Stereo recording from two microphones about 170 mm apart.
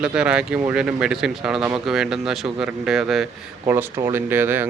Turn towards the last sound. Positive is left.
turn(degrees=-10)  # may be behind; listen again after turning